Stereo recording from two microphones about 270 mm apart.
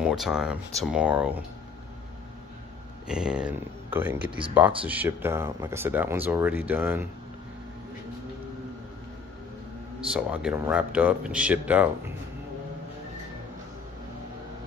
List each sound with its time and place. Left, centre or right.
0.0 s speech: centre
3.1 s speech: centre
9.9 s speech: centre